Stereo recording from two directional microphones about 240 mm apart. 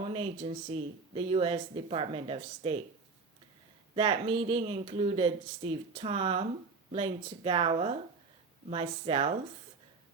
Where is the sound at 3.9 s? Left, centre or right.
Right.